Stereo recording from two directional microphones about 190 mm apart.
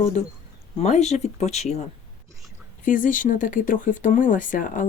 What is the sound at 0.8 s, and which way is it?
Speech, 35° left (ahead or behind).